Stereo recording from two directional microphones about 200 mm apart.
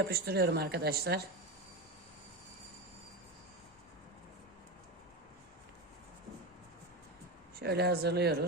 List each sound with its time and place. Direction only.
0.0 s speech: 55° right (ahead or behind)
7.6 s speech: 55° right (ahead or behind)